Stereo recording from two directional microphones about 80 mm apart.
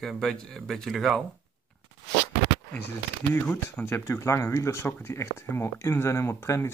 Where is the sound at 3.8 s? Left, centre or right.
Left.